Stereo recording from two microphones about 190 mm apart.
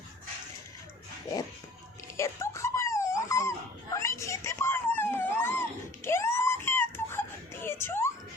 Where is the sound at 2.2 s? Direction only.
15° left (ahead or behind).